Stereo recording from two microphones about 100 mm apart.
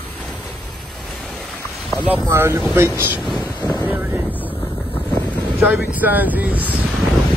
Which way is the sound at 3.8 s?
20° right (ahead or behind).